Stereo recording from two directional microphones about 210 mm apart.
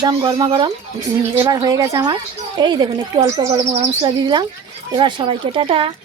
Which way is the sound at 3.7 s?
30° right (ahead or behind).